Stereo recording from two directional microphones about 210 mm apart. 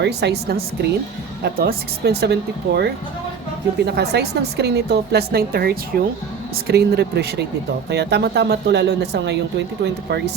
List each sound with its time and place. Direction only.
0.0 s speech: 55° right (ahead or behind)
5.9 s speech: 5° left (ahead or behind)
6.7 s speech: 50° right (ahead or behind)